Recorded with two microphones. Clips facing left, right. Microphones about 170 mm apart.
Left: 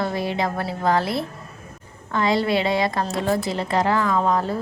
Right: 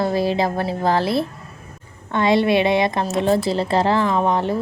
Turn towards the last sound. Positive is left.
turn(degrees=-25)  # may be behind; listen again after turning